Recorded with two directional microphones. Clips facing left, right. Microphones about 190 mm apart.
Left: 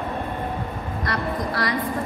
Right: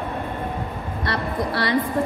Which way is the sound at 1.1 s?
30° right (ahead or behind).